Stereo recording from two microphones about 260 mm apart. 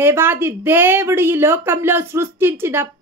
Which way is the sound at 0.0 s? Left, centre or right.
Centre.